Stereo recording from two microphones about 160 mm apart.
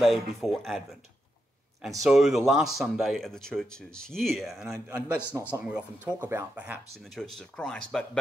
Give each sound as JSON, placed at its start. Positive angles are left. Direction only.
{"t": 0.0, "sound": "speech", "side_deg": 0}
{"t": 2.0, "sound": "speech", "side_deg": 0}
{"t": 4.7, "sound": "speech", "side_deg": -15}
{"t": 7.2, "sound": "speech", "side_deg": 5}